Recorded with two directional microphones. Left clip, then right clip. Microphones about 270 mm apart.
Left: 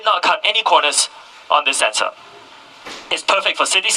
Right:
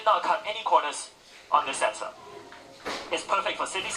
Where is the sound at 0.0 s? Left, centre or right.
Left.